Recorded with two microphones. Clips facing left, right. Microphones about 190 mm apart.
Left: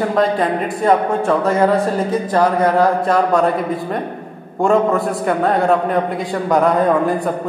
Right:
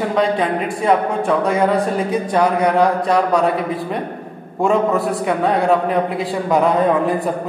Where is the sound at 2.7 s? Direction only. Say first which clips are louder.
Left 1 dB; centre (ahead or behind).